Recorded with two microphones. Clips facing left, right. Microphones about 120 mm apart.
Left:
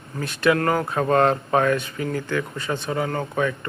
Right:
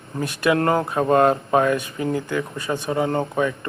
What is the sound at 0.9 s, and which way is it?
Speech, 10° right (ahead or behind).